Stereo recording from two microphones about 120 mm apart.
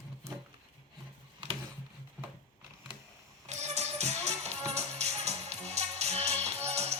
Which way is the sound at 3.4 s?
70° right (ahead or behind).